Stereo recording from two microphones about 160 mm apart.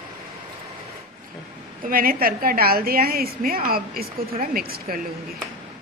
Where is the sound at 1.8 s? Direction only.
65° right (ahead or behind).